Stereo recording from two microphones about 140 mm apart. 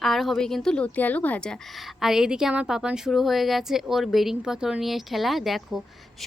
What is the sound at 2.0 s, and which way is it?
A woman's voice, 5° right (ahead or behind).